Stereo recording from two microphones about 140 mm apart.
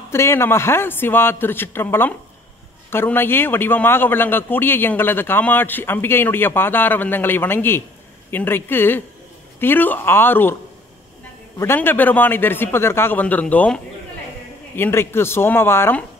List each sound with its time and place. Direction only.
0.1 s a man's voice: 20° left (ahead or behind)
11.5 s a man's voice: 15° left (ahead or behind)
14.8 s a man's voice: 15° left (ahead or behind)